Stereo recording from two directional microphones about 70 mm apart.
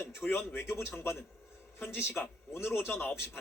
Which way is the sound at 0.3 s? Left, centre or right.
Left.